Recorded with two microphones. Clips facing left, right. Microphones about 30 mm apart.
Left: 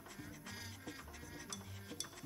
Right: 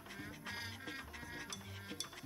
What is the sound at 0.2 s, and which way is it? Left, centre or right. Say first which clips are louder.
Music: right 5 dB; right.